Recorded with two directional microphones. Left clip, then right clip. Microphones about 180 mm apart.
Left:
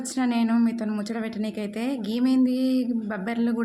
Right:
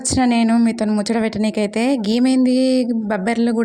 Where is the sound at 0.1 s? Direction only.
45° right (ahead or behind).